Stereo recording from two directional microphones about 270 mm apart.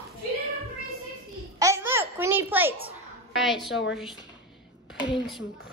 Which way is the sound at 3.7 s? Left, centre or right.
Left.